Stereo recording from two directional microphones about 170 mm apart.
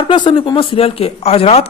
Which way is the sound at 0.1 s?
30° left (ahead or behind).